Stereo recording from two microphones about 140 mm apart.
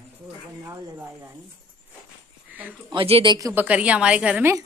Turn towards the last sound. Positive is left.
turn(degrees=-5)  # may be behind; listen again after turning